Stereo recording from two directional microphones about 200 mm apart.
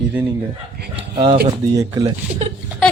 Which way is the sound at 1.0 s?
25° right (ahead or behind).